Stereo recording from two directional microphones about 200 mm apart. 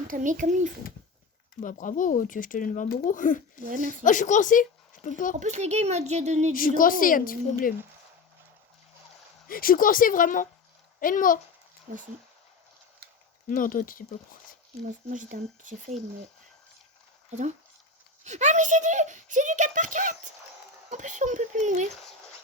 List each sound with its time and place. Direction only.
0.1 s a child's voice: 40° right (ahead or behind)
1.6 s speech: 40° left (ahead or behind)
5.4 s a child's voice: 35° right (ahead or behind)
6.5 s a woman's voice: 45° left (ahead or behind)
9.5 s a woman's voice: 45° left (ahead or behind)
11.9 s speech: 45° right (ahead or behind)
13.5 s a woman's voice: 45° left (ahead or behind)
14.8 s a child's voice: 40° right (ahead or behind)
18.2 s a child's voice: 35° right (ahead or behind)